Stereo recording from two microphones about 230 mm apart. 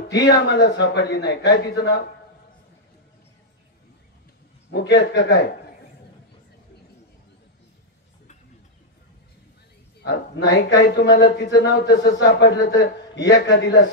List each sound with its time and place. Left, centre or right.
0.5 s a man's voice: left
4.7 s a man's voice: left
10.0 s a man's voice: left